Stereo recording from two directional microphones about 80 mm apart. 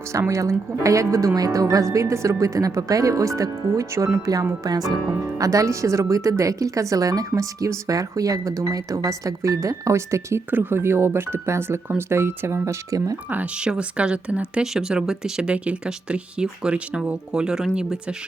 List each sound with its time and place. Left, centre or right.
0.1 s speech: right
4.6 s speech: right
5.2 s speech: right
10.5 s speech: right
12.6 s speech: right
13.3 s speech: centre